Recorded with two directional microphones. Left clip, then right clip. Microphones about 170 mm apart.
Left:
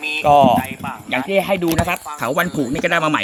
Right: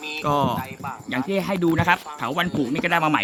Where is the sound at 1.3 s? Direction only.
30° right (ahead or behind).